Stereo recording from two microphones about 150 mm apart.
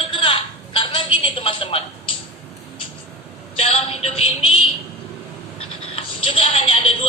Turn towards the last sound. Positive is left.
turn(degrees=40)  # may be behind; listen again after turning